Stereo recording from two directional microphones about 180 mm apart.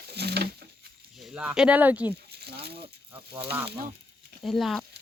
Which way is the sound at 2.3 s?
60° right (ahead or behind).